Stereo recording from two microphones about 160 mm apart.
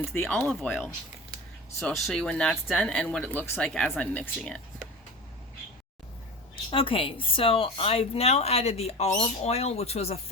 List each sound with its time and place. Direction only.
0.1 s speech: 10° left (ahead or behind)
6.7 s speech: 35° left (ahead or behind)